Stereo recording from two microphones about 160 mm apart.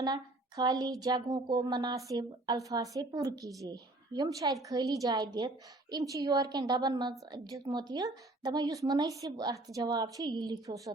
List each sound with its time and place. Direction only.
0.0 s speech: 25° right (ahead or behind)